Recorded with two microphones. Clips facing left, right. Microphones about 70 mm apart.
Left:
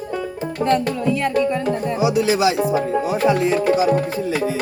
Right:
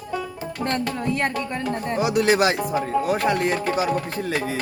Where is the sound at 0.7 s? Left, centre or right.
Left.